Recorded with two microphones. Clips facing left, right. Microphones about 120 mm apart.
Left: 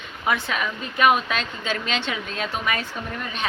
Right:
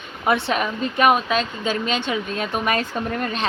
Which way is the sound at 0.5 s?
35° right (ahead or behind).